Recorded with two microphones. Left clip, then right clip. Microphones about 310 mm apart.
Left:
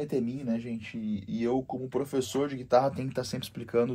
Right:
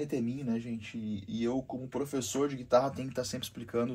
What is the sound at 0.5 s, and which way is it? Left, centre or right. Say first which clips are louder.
Speech: left 3 dB; left.